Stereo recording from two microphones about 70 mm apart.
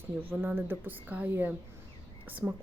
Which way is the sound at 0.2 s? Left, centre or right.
Right.